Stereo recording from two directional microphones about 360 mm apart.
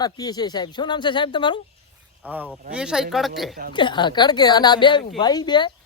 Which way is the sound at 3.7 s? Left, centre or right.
Centre.